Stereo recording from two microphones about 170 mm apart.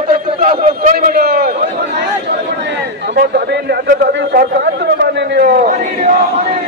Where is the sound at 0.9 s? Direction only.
65° right (ahead or behind).